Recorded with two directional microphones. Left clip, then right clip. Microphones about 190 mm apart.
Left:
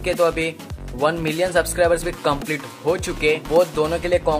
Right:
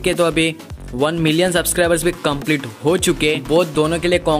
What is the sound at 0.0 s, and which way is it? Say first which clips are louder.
Speech: right 3 dB; 45° right (ahead or behind).